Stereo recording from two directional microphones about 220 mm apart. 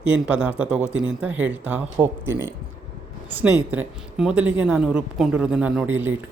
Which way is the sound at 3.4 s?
10° right (ahead or behind).